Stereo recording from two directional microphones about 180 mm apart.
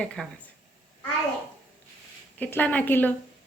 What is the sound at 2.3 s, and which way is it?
Speech, 10° left (ahead or behind).